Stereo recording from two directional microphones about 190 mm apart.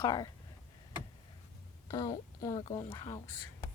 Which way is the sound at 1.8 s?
20° left (ahead or behind).